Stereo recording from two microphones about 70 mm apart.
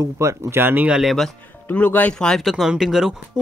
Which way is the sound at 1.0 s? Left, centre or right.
Centre.